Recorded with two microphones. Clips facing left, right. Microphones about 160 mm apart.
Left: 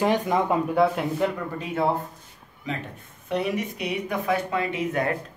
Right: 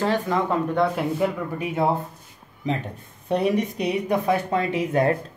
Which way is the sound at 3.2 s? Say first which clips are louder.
Right 4 dB; 35° right (ahead or behind).